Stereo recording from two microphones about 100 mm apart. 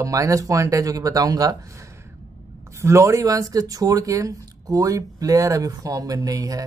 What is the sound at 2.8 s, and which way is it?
Speech, 30° right (ahead or behind).